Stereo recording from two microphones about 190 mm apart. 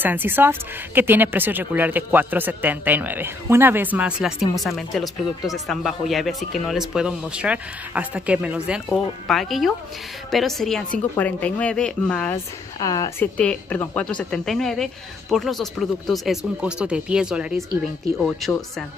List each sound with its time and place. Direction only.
0.0 s speech: 10° right (ahead or behind)
12.7 s a woman's voice: 20° left (ahead or behind)
13.4 s speech: 10° left (ahead or behind)